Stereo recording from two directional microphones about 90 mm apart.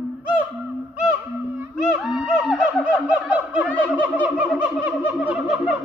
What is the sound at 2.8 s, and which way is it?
Snicker, 15° right (ahead or behind).